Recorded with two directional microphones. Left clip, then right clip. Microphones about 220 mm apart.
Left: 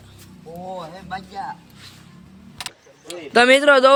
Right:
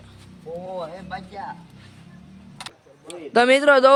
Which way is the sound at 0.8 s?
45° left (ahead or behind).